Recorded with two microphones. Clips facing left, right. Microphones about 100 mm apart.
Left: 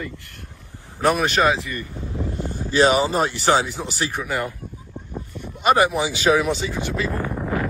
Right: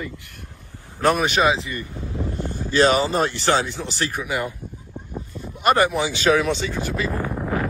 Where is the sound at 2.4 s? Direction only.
15° left (ahead or behind).